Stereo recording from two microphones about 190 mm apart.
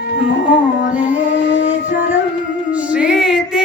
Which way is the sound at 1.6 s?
40° left (ahead or behind).